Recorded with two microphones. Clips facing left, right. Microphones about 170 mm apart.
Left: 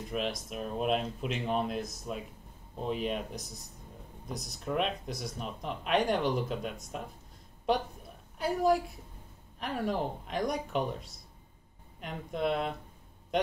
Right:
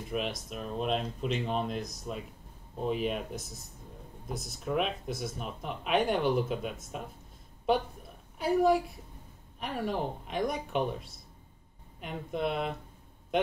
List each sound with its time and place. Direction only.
0.1 s speech: centre (ahead or behind)
8.4 s speech: centre (ahead or behind)